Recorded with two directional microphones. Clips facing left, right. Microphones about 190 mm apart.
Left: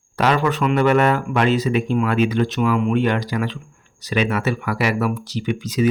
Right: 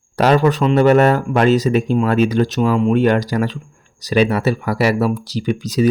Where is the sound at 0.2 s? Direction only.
40° right (ahead or behind).